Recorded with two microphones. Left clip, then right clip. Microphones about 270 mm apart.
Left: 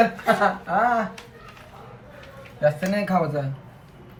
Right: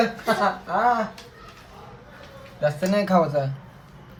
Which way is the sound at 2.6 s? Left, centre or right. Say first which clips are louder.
Even; right.